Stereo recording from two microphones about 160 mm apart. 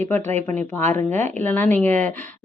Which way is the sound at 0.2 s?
45° right (ahead or behind).